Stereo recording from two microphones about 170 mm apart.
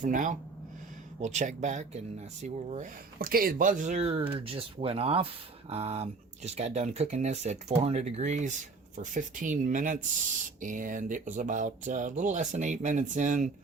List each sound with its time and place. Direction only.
0.0 s speech: 50° right (ahead or behind)